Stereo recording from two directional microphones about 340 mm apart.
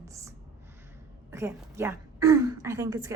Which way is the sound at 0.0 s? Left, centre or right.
Centre.